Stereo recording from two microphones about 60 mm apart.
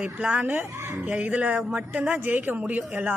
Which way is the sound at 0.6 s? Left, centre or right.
Right.